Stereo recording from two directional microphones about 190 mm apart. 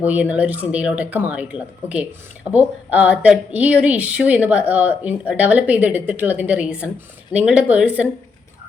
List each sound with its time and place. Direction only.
0.0 s speech: 10° right (ahead or behind)